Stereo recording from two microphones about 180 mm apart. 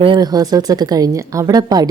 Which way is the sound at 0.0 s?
25° right (ahead or behind).